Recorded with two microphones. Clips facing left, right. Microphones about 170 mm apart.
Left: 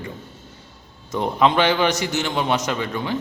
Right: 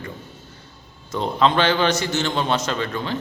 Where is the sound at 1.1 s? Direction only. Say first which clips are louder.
Left 1 dB; 15° left (ahead or behind).